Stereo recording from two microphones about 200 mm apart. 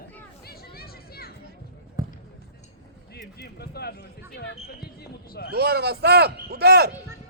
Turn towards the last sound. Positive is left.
turn(degrees=-55)  # may be behind; listen again after turning